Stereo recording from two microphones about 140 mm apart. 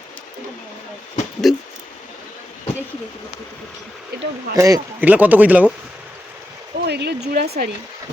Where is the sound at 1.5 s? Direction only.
Centre (ahead or behind).